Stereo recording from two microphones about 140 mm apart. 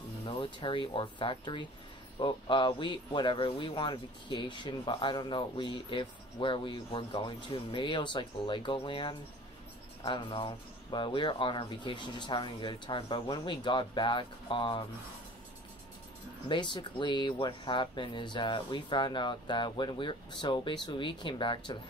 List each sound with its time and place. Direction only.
0.2 s speech: 40° left (ahead or behind)
16.4 s speech: 35° left (ahead or behind)